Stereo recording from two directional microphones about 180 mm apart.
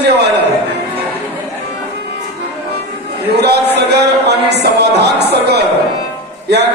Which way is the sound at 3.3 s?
65° right (ahead or behind).